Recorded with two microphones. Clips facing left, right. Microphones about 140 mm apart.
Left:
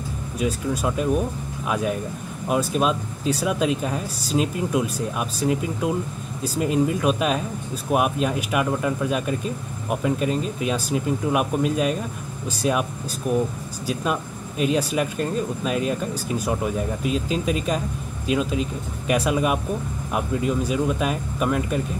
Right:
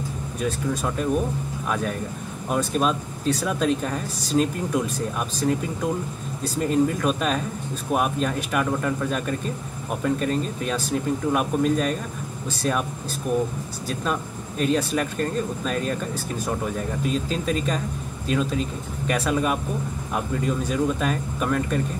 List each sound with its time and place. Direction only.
0.4 s speech: 5° left (ahead or behind)
14.6 s speech: 10° left (ahead or behind)